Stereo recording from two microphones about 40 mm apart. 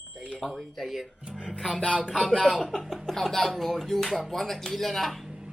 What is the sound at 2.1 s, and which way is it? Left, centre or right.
Speech, centre.